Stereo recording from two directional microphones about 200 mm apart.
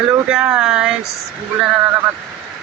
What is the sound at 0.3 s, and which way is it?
Speech, 5° right (ahead or behind).